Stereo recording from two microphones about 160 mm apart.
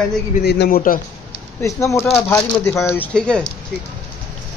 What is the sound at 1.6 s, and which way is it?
Speech, 20° left (ahead or behind).